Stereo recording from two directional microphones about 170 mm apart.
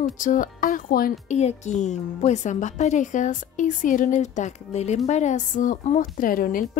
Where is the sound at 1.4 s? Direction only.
40° left (ahead or behind).